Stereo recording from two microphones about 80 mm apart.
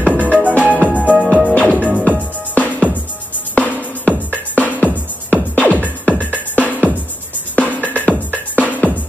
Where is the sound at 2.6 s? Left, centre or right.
Centre.